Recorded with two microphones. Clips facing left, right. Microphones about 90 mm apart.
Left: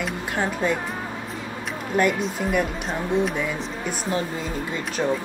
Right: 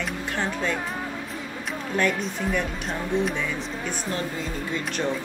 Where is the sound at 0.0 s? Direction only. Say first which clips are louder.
Left 2 dB; 10° left (ahead or behind).